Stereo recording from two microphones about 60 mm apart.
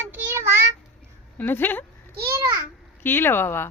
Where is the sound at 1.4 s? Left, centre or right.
Left.